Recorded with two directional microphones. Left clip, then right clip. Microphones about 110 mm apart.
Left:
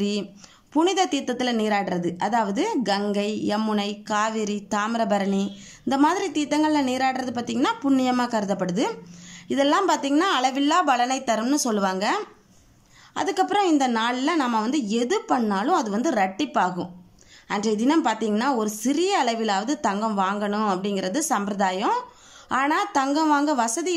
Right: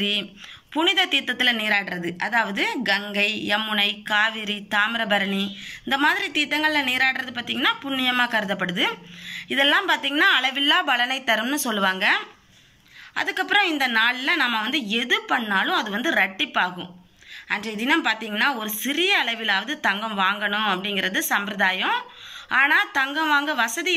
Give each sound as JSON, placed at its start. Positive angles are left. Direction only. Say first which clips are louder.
{"t": 0.0, "sound": "speech", "louder": "right 4 dB", "side_deg": 55}
{"t": 1.9, "sound": "a woman's voice", "louder": "left 2 dB", "side_deg": 30}
{"t": 3.4, "sound": "speech", "louder": "right 4 dB", "side_deg": 55}
{"t": 13.5, "sound": "speech", "louder": "right 4 dB", "side_deg": 60}